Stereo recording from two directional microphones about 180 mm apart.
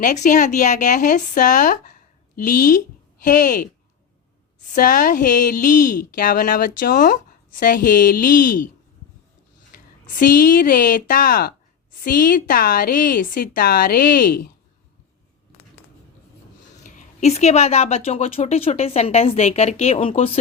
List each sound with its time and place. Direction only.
0.0 s speech: 45° left (ahead or behind)
4.7 s speech: 50° left (ahead or behind)
10.1 s speech: 50° left (ahead or behind)
16.8 s speech: 45° left (ahead or behind)